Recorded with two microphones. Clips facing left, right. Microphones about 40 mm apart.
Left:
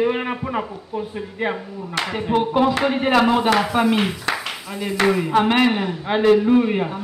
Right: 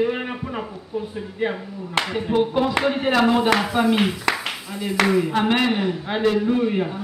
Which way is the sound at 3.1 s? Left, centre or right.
Left.